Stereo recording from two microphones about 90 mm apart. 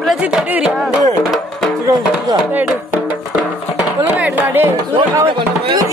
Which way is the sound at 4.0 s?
20° right (ahead or behind).